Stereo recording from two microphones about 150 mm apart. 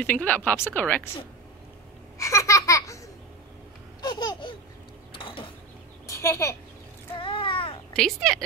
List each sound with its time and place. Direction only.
0.0 s a woman's voice: 10° left (ahead or behind)
2.1 s laughter: 20° left (ahead or behind)
4.0 s laughter: 30° left (ahead or behind)
5.1 s mechanisms: 35° left (ahead or behind)
6.0 s a sound: 20° left (ahead or behind)
7.2 s a sound: 35° left (ahead or behind)
7.9 s a woman's voice: 5° left (ahead or behind)